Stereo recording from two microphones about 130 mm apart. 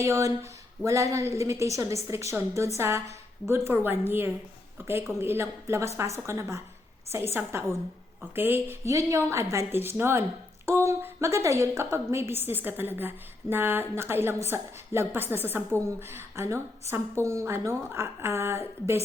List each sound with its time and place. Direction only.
0.0 s a woman's voice: 25° right (ahead or behind)